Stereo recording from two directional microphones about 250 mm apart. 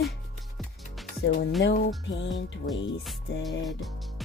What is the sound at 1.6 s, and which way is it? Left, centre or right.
Speech, left.